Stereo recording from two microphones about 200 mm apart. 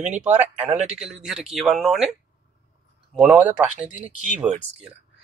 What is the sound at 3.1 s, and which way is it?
Speech, 5° right (ahead or behind).